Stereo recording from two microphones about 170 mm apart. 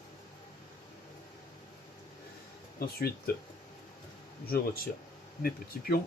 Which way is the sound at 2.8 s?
65° left (ahead or behind).